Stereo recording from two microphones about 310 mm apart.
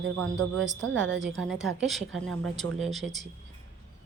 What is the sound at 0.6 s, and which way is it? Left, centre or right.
Speech, right.